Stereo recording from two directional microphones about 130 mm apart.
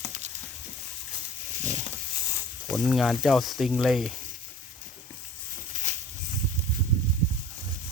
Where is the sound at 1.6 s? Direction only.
70° right (ahead or behind).